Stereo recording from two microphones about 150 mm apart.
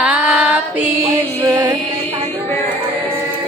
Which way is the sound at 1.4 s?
20° right (ahead or behind).